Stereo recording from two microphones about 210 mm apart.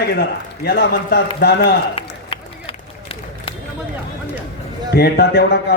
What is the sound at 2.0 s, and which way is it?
Run, 25° left (ahead or behind).